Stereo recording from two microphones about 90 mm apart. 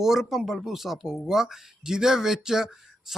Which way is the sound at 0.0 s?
5° right (ahead or behind).